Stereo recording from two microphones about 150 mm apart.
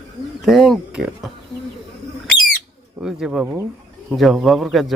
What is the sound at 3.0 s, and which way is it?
Speech, 5° right (ahead or behind).